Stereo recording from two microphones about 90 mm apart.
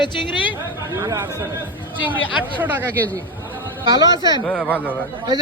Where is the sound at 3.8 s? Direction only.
50° right (ahead or behind).